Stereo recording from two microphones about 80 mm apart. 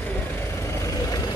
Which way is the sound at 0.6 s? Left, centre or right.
Left.